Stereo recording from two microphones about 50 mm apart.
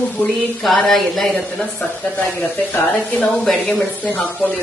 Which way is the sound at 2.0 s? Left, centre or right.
Centre.